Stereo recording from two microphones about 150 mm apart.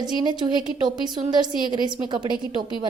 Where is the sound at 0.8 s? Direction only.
30° right (ahead or behind).